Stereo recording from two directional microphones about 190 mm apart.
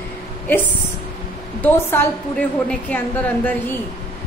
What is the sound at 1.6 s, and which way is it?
A woman's voice, 10° left (ahead or behind).